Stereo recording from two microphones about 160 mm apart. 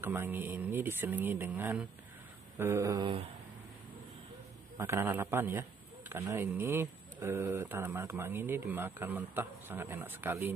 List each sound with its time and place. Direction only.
0.0 s a man's voice: 15° right (ahead or behind)
4.7 s a man's voice: 15° right (ahead or behind)